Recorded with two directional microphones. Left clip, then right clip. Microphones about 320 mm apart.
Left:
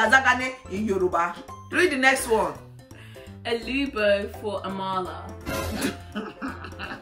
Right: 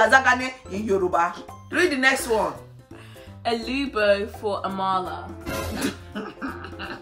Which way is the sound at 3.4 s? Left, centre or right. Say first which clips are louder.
Right 1 dB; centre.